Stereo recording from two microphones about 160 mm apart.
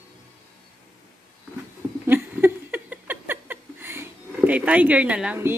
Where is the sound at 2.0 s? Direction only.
15° right (ahead or behind).